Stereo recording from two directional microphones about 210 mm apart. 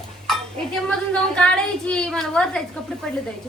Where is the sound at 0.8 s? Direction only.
5° left (ahead or behind).